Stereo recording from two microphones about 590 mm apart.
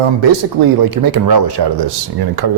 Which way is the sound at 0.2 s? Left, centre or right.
Right.